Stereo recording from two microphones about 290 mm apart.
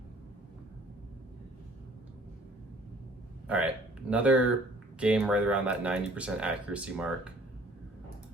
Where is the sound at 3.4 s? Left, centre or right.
Centre.